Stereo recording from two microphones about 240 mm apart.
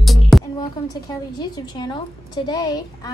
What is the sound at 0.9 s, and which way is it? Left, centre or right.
A child's voice, centre.